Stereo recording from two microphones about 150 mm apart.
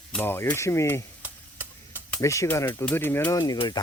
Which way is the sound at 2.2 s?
20° left (ahead or behind).